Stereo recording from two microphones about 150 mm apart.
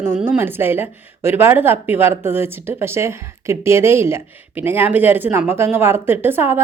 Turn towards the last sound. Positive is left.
turn(degrees=-15)  # may be behind; listen again after turning